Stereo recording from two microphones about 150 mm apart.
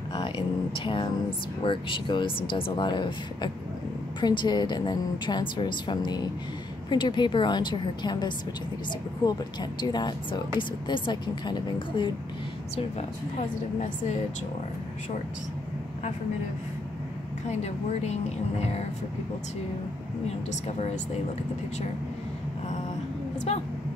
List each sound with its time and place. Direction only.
0.7 s a woman's voice: 35° left (ahead or behind)
18.0 s speech: 45° left (ahead or behind)